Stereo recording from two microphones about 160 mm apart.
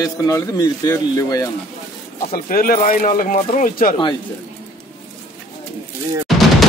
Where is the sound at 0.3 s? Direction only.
25° left (ahead or behind).